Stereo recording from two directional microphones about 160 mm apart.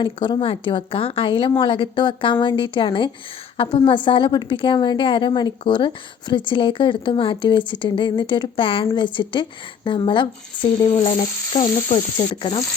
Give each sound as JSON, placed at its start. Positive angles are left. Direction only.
{"t": 0.0, "sound": "a woman's voice", "side_deg": 30}
{"t": 11.6, "sound": "frying", "side_deg": 50}
{"t": 12.1, "sound": "a woman's voice", "side_deg": 30}